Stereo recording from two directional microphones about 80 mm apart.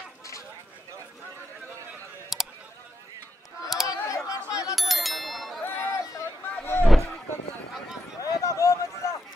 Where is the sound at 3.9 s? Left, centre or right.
Left.